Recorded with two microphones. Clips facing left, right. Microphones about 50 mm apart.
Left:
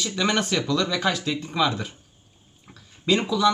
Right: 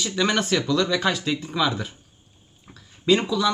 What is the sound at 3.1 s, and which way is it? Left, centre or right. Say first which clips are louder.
Speech: even; centre.